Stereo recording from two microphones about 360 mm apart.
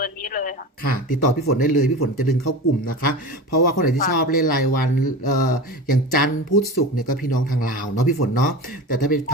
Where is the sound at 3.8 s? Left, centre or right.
Left.